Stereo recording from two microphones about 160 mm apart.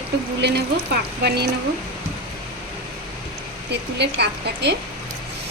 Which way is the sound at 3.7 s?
90° right.